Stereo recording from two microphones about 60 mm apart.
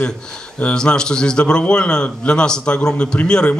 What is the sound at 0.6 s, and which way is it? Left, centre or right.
Speech, centre.